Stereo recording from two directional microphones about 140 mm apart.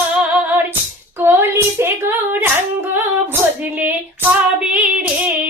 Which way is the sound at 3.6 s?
10° right (ahead or behind).